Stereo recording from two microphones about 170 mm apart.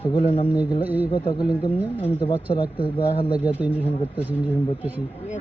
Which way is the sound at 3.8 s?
10° left (ahead or behind).